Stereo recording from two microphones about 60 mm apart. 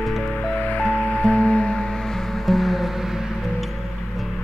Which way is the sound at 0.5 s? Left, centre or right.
Left.